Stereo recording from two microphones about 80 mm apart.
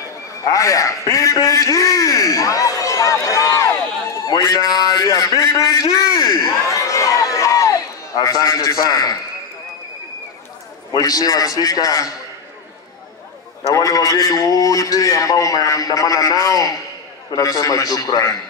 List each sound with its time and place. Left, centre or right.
0.4 s a man's voice: left
4.3 s a sound: left
8.2 s a man's voice: left
10.9 s a man's voice: left
13.7 s a man's voice: left